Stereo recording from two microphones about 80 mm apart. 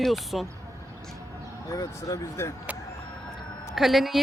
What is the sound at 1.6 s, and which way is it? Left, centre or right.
Speech, left.